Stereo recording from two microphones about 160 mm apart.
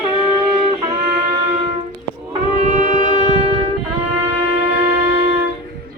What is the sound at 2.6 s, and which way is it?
Wind instrument, 50° right (ahead or behind).